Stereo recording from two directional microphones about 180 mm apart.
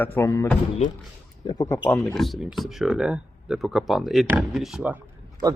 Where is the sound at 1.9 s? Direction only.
5° left (ahead or behind).